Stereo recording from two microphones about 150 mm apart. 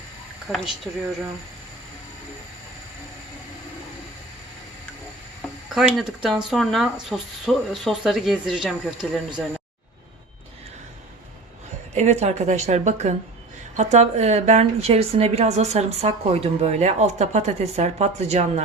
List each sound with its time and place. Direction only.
0.5 s speech: centre (ahead or behind)
5.6 s speech: centre (ahead or behind)
11.9 s a woman's voice: 50° right (ahead or behind)